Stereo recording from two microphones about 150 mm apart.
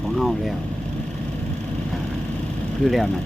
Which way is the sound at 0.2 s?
Centre (ahead or behind).